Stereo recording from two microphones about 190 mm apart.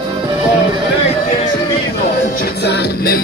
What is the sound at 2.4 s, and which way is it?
Music, 60° left (ahead or behind).